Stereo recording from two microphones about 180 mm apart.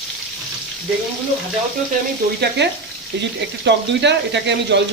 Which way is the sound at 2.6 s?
70° right (ahead or behind).